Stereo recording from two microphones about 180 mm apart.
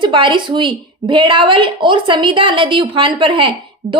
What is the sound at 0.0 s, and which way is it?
A woman's voice, 25° right (ahead or behind).